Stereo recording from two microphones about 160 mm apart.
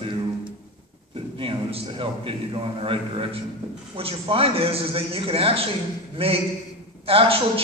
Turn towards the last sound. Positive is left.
turn(degrees=-35)  # may be behind; listen again after turning